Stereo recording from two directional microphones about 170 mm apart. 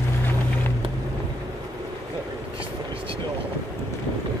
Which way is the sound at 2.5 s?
30° right (ahead or behind).